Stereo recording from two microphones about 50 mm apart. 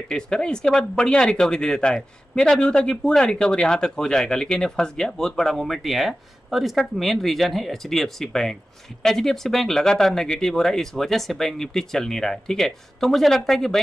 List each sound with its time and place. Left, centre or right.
0.1 s speech: centre